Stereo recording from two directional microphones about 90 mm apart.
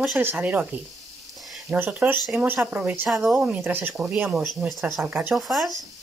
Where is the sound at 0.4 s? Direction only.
15° right (ahead or behind).